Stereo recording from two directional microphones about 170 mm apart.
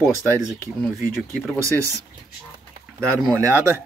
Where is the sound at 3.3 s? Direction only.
15° right (ahead or behind).